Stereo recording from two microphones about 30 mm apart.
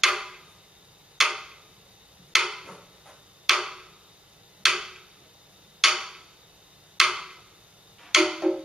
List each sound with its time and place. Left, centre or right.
0.0 s tick-tock: centre
2.3 s a sound: centre
4.6 s tick-tock: centre
5.8 s a sound: centre
7.0 s tick-tock: centre
8.0 s music: centre